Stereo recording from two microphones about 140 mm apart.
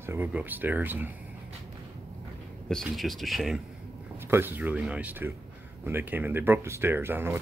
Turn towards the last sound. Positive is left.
turn(degrees=-15)  # may be behind; listen again after turning